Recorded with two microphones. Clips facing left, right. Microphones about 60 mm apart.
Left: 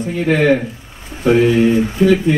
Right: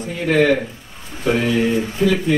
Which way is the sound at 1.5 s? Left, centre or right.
Centre.